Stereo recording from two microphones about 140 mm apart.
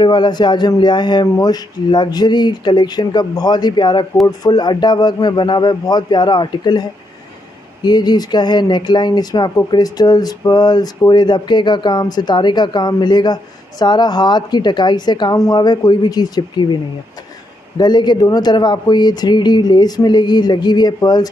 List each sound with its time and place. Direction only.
0.0 s speech: 30° left (ahead or behind)
17.7 s speech: 30° left (ahead or behind)